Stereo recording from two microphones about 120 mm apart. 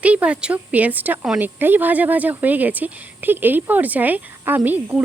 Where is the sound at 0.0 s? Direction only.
10° right (ahead or behind).